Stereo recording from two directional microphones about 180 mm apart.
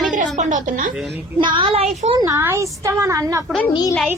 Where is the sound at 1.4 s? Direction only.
25° right (ahead or behind).